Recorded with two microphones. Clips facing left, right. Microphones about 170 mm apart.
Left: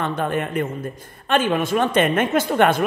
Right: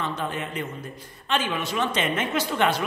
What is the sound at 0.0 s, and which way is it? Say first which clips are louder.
A woman's voice: left 6 dB; 55° left (ahead or behind).